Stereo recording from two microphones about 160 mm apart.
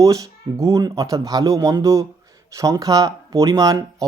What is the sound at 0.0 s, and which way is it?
Speech, 20° right (ahead or behind).